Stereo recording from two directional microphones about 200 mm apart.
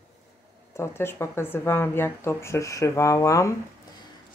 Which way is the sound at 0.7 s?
10° left (ahead or behind).